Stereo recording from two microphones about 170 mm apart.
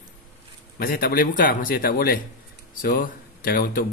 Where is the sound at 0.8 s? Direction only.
60° left (ahead or behind).